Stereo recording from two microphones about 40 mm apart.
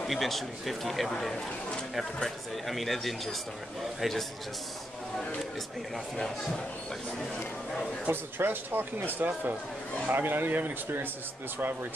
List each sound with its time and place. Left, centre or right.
0.0 s speech: centre
2.2 s speech: centre
6.1 s speech: centre
8.1 s speech: right